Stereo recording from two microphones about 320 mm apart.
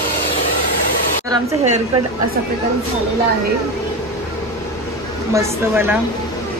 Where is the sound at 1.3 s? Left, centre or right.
Right.